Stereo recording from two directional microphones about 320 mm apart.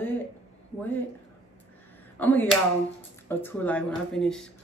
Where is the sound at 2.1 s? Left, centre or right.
Centre.